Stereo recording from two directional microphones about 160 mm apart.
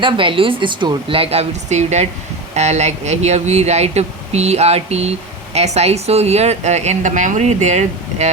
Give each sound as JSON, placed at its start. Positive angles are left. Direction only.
{"t": 0.0, "sound": "a woman's voice", "side_deg": -30}